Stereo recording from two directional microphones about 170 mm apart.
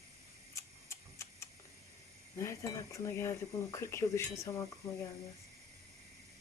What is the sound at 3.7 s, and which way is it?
Speech, 15° left (ahead or behind).